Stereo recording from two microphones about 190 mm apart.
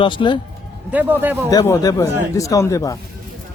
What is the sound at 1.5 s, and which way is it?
Speech, 20° left (ahead or behind).